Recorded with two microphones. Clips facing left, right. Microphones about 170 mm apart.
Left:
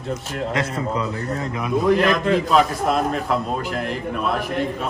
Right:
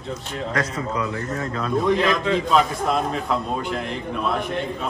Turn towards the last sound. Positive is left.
turn(degrees=5)  # may be behind; listen again after turning